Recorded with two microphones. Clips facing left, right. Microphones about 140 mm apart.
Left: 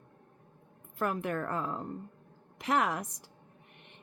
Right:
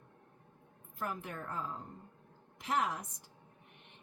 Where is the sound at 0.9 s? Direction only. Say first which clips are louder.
Left 9 dB; 75° left (ahead or behind).